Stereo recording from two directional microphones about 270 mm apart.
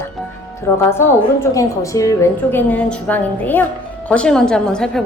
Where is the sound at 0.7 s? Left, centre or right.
Centre.